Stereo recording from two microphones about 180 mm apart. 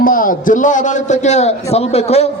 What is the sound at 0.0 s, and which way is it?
A man's voice, 50° left (ahead or behind).